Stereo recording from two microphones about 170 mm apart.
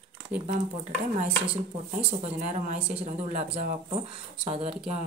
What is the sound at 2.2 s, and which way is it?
Speech, 45° right (ahead or behind).